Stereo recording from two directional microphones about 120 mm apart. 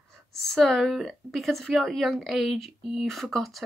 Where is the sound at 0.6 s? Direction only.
5° left (ahead or behind).